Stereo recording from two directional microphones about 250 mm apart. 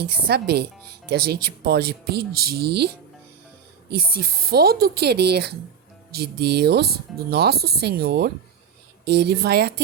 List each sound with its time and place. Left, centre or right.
0.0 s speech: right